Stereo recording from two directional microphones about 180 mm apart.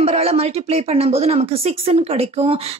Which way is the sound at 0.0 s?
35° right (ahead or behind).